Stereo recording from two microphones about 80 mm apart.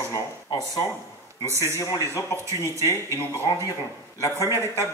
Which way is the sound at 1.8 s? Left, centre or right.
Left.